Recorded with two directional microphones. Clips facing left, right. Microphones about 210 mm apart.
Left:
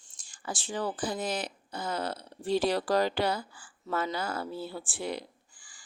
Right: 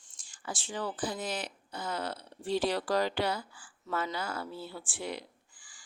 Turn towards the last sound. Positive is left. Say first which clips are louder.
# left 1 dB
turn(degrees=35)  # may be behind; listen again after turning